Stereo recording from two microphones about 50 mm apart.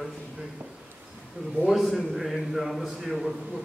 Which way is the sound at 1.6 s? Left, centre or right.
Centre.